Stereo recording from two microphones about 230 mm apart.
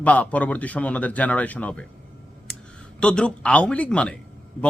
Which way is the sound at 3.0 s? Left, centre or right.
Centre.